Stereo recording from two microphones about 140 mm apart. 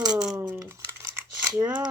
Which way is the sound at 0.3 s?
15° right (ahead or behind).